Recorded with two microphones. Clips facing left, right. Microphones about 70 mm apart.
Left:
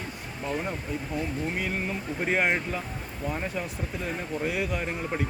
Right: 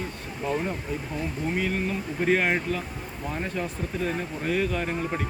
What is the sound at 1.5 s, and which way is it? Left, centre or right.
Speech, centre.